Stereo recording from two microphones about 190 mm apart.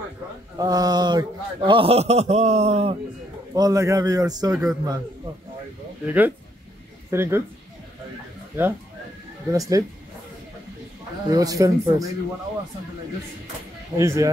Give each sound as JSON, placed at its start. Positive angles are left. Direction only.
{"t": 0.6, "sound": "a man's voice", "side_deg": -20}
{"t": 3.5, "sound": "a man's voice", "side_deg": -20}
{"t": 6.0, "sound": "speech", "side_deg": -10}
{"t": 9.5, "sound": "speech", "side_deg": -20}
{"t": 11.2, "sound": "a man's voice", "side_deg": -20}
{"t": 13.9, "sound": "speech", "side_deg": -15}